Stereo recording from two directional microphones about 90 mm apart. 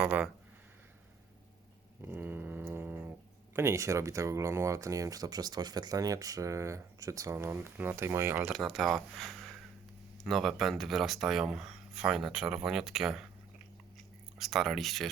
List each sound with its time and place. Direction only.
0.0 s speech: 15° right (ahead or behind)
2.0 s speech: 20° right (ahead or behind)
8.6 s speech: centre (ahead or behind)
14.3 s speech: centre (ahead or behind)